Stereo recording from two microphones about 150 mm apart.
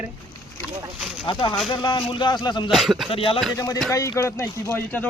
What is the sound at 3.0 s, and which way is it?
Speech, 40° left (ahead or behind).